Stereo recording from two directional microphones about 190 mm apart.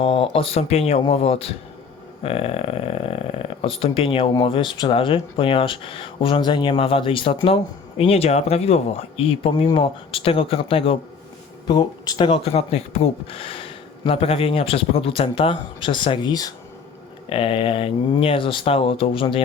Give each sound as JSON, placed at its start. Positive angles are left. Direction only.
{"t": 0.0, "sound": "speech", "side_deg": 30}